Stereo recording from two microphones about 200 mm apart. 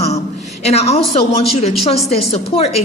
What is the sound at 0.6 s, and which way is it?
A woman's voice, 30° left (ahead or behind).